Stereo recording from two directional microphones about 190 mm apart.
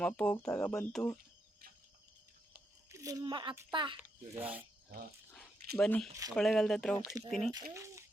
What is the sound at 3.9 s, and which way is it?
Speech, 10° right (ahead or behind).